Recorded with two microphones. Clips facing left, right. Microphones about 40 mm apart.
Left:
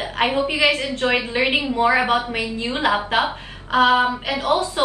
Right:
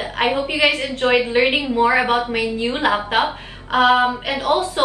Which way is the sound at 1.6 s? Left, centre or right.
Right.